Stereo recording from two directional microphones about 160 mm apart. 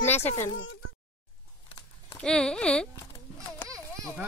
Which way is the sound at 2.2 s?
5° left (ahead or behind).